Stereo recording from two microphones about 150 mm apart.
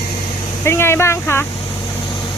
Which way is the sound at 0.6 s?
15° left (ahead or behind).